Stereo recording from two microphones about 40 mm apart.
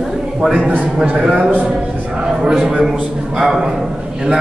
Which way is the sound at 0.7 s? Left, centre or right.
Right.